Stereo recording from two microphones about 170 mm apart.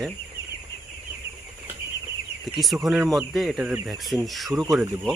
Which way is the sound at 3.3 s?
Centre (ahead or behind).